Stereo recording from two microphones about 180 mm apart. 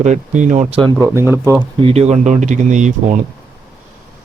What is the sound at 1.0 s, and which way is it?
Speech, 15° right (ahead or behind).